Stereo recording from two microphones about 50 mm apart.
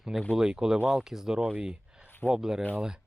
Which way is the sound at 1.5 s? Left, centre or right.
Right.